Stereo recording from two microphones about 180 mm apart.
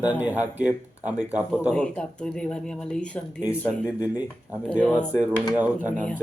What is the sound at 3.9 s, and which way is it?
Speech, 10° right (ahead or behind).